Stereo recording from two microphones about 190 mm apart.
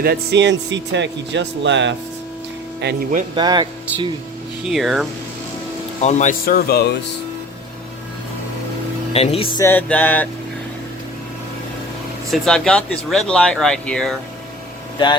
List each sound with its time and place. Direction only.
0.0 s speech: 60° right (ahead or behind)
2.8 s speech: 50° right (ahead or behind)
3.3 s speech: 20° right (ahead or behind)
4.7 s speech: centre (ahead or behind)
6.0 s speech: 40° left (ahead or behind); by 6.9 s 55° left (ahead or behind)
9.1 s speech: 30° left (ahead or behind)
9.6 s music: 10° left (ahead or behind)
12.3 s speech: 5° left (ahead or behind)